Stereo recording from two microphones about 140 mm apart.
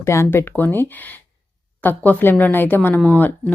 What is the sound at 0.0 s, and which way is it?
Speech, 20° left (ahead or behind).